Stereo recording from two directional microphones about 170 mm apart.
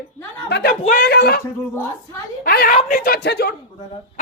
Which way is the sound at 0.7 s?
50° left (ahead or behind).